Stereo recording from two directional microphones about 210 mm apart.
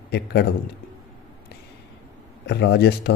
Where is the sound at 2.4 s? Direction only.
50° left (ahead or behind).